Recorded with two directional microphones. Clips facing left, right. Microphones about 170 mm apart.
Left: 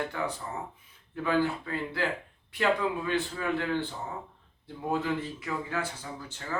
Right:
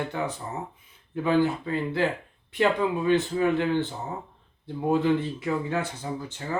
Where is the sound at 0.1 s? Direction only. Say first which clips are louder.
Right 3 dB; 20° right (ahead or behind).